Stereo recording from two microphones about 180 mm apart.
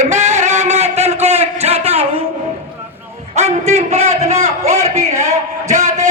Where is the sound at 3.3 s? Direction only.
40° right (ahead or behind).